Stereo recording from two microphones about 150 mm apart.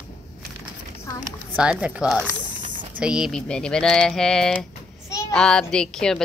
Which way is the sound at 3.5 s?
5° left (ahead or behind).